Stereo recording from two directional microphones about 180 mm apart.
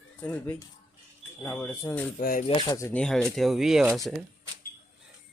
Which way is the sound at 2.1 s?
50° left (ahead or behind).